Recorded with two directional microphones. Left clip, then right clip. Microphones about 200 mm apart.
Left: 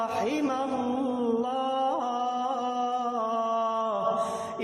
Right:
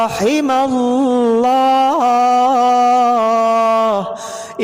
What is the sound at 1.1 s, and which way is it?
Music, 50° right (ahead or behind).